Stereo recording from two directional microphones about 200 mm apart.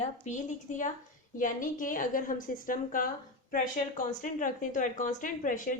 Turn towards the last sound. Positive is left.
turn(degrees=40)  # may be behind; listen again after turning